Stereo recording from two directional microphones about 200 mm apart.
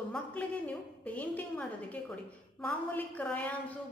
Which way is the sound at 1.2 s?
5° left (ahead or behind).